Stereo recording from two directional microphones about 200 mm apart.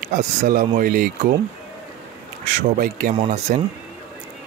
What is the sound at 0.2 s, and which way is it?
Speech, 40° right (ahead or behind).